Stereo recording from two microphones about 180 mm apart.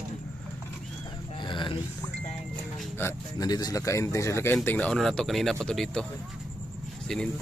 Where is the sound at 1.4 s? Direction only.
25° left (ahead or behind).